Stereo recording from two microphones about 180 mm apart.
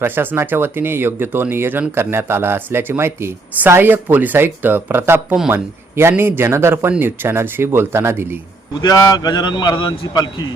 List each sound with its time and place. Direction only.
0.0 s speech: 10° right (ahead or behind)
8.8 s a man's voice: 20° left (ahead or behind)